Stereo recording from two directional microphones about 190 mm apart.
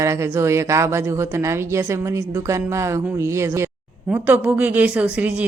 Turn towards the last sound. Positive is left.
turn(degrees=-5)  # may be behind; listen again after turning